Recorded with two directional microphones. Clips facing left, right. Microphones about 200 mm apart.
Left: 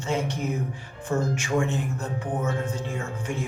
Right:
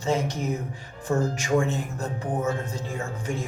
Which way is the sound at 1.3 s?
35° right (ahead or behind).